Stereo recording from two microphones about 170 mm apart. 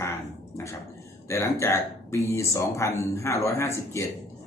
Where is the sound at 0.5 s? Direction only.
15° left (ahead or behind).